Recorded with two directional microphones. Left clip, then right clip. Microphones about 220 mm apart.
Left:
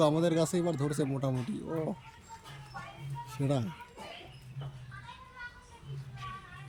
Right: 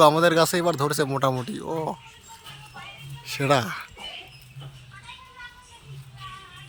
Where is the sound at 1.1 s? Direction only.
40° right (ahead or behind).